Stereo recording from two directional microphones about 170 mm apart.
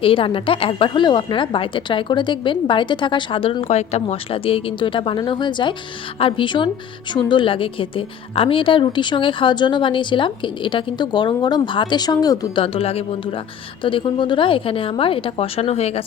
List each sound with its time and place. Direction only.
0.0 s a woman's voice: 30° left (ahead or behind)
12.6 s a woman's voice: 35° left (ahead or behind)